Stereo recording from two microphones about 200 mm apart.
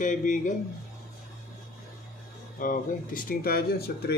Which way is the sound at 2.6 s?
45° left (ahead or behind).